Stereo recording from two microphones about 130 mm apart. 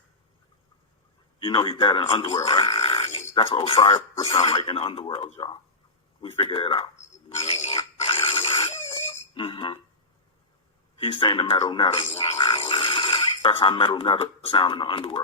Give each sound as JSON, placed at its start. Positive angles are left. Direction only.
{"t": 1.4, "sound": "speech", "side_deg": 40}
{"t": 3.3, "sound": "speech", "side_deg": 45}
{"t": 7.4, "sound": "pig", "side_deg": 50}
{"t": 7.9, "sound": "a sound", "side_deg": 45}
{"t": 11.0, "sound": "speech", "side_deg": 40}
{"t": 11.6, "sound": "a sound", "side_deg": 40}
{"t": 13.6, "sound": "speech", "side_deg": 40}